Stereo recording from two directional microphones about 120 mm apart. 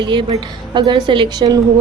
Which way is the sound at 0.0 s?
40° right (ahead or behind).